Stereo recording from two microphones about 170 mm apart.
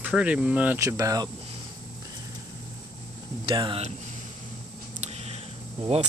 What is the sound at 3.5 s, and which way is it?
Speech, 30° right (ahead or behind).